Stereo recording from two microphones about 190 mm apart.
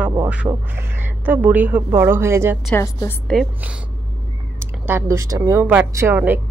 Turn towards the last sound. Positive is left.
turn(degrees=-10)  # may be behind; listen again after turning